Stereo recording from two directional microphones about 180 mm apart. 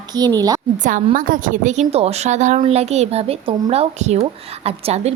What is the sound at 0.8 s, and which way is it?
A woman's voice, 45° right (ahead or behind).